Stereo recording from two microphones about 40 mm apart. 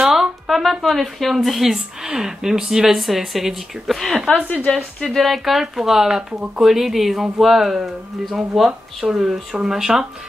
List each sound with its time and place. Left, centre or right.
0.1 s a sound: centre
0.8 s speech: centre
4.7 s a woman's voice: left
5.1 s speech: centre